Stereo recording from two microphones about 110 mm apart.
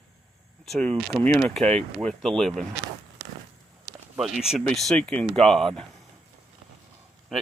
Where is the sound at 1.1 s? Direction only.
30° right (ahead or behind).